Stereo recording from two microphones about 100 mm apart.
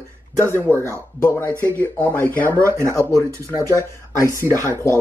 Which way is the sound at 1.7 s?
15° left (ahead or behind).